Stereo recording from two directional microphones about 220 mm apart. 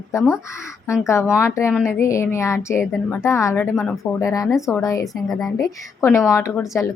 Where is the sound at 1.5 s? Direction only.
15° left (ahead or behind).